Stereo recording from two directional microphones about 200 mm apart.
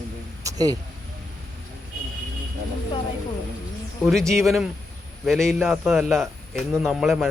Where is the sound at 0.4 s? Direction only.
20° right (ahead or behind).